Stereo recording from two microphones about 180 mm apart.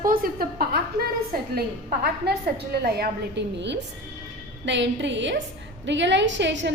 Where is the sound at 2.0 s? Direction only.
65° right (ahead or behind).